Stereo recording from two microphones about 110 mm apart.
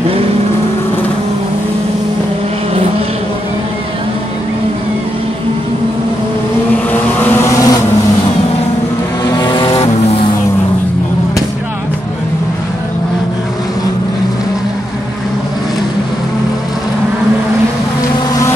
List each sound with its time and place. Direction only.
6.9 s vehicle: 20° left (ahead or behind)
9.2 s vehicle: 40° left (ahead or behind)
9.8 s vehicle: 65° left (ahead or behind)